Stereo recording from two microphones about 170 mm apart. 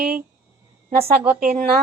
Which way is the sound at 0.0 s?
60° right (ahead or behind).